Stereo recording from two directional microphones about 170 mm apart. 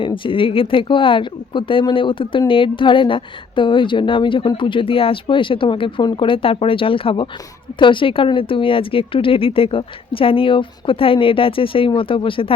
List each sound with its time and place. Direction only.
0.0 s speech: 30° left (ahead or behind)